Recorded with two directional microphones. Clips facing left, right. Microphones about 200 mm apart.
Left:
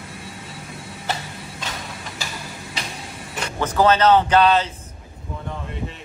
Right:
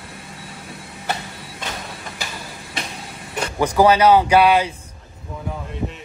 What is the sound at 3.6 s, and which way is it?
Speech, 10° right (ahead or behind).